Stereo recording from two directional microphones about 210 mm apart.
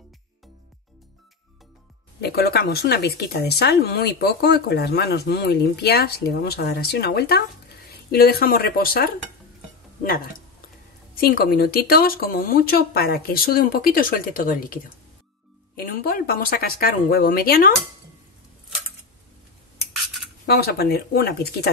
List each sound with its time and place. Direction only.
2.2 s speech: 50° left (ahead or behind)
11.1 s speech: 45° left (ahead or behind)
20.4 s speech: 50° left (ahead or behind)